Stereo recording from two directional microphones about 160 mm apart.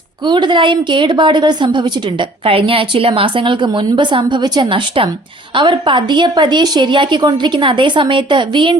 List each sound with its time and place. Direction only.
0.3 s a woman's voice: 30° right (ahead or behind)